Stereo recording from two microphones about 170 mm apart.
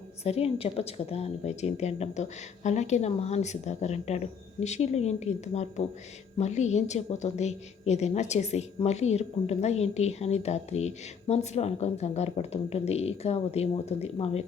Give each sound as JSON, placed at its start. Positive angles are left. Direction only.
{"t": 0.3, "sound": "a woman's voice", "side_deg": 35}